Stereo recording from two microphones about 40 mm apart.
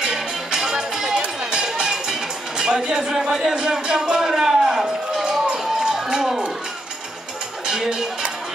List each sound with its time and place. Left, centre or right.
0.0 s music: centre
5.2 s run: centre
7.6 s music: centre